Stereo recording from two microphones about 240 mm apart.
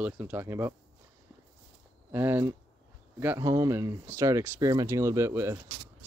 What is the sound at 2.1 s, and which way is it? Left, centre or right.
Speech, centre.